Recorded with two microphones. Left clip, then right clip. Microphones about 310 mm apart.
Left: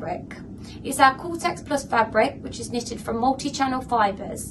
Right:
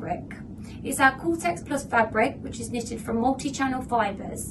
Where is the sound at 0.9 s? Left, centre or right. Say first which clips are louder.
Left 3 dB; centre.